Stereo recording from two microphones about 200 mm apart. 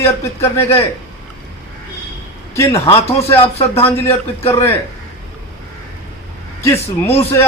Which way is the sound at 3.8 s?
30° left (ahead or behind).